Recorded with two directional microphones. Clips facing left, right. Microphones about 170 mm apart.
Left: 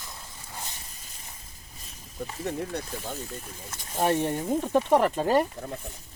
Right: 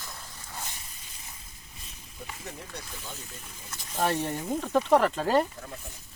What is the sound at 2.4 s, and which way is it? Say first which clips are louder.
Speech: left 14 dB; 55° left (ahead or behind).